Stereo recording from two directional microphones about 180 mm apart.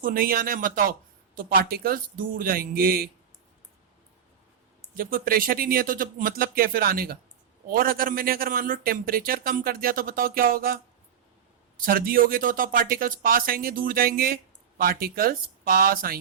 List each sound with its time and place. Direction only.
0.0 s a man's voice: 50° right (ahead or behind)
4.9 s a man's voice: 55° right (ahead or behind)
11.8 s a man's voice: 55° right (ahead or behind)